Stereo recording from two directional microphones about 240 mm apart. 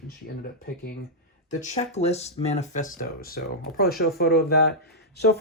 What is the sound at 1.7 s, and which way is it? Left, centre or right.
Speech, left.